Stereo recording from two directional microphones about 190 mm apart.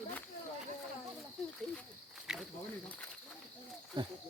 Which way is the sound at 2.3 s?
5° right (ahead or behind).